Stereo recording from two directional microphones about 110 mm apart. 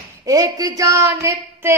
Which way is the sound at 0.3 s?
35° right (ahead or behind).